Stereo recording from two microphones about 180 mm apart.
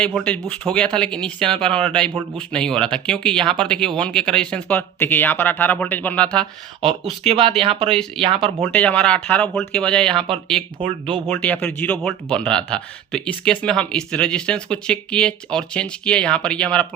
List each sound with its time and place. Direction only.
0.0 s speech: 5° left (ahead or behind)
6.8 s speech: 30° right (ahead or behind)
8.6 s speech: 10° left (ahead or behind)
10.8 s speech: 30° right (ahead or behind)
11.3 s speech: 5° left (ahead or behind)